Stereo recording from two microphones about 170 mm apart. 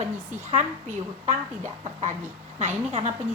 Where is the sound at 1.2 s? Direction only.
45° right (ahead or behind).